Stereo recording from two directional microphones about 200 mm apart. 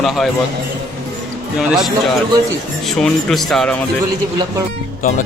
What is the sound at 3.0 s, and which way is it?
Speech, centre (ahead or behind).